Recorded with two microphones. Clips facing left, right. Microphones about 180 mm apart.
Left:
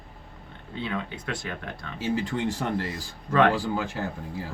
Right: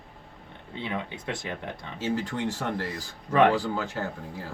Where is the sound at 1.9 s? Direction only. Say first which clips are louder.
Left 2 dB; 15° left (ahead or behind).